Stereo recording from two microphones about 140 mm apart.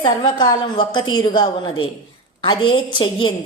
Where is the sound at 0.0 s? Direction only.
35° left (ahead or behind).